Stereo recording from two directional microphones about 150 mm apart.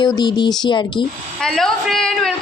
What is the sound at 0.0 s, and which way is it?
Speech, 30° left (ahead or behind).